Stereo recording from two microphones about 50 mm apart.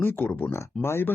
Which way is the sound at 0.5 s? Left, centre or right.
Left.